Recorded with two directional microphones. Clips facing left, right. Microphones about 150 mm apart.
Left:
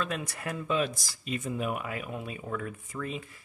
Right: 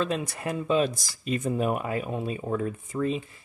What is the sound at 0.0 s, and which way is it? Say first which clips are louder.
Speech: right 5 dB; 25° right (ahead or behind).